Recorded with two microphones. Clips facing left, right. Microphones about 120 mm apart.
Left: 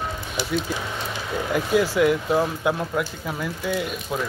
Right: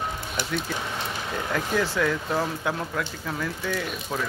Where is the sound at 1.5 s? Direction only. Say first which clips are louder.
Left 5 dB; 15° left (ahead or behind).